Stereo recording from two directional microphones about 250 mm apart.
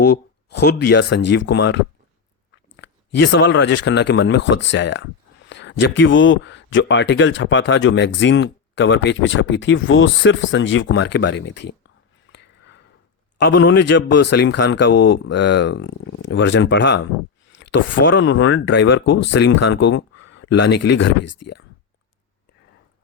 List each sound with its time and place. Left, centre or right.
0.0 s speech: left
12.3 s a sound: left
13.4 s speech: left
19.0 s speech: left
19.3 s speech: left